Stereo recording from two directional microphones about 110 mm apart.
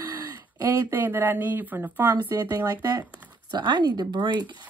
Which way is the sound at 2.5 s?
35° right (ahead or behind).